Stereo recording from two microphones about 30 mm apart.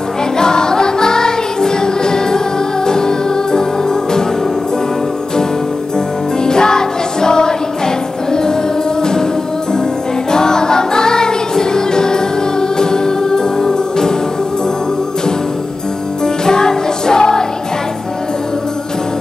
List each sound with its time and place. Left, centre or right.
0.4 s music: left
6.4 s music: left
10.3 s music: left
16.4 s music: left